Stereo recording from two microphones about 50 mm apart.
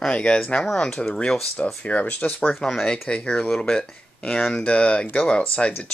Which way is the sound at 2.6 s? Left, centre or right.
Centre.